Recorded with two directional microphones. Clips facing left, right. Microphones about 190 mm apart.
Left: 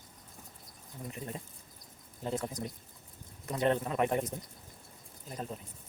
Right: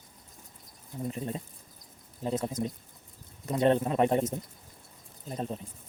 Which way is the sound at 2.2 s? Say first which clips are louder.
Right 5 dB; 20° right (ahead or behind).